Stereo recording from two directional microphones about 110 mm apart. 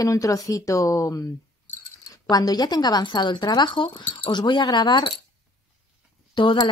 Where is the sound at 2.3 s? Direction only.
35° left (ahead or behind).